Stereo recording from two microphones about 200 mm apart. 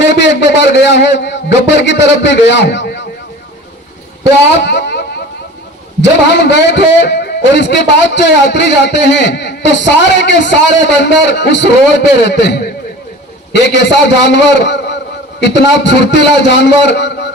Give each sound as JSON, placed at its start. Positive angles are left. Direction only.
{"t": 0.0, "sound": "a man's voice", "side_deg": 60}
{"t": 4.6, "sound": "a sound", "side_deg": 60}
{"t": 6.3, "sound": "a man's voice", "side_deg": 60}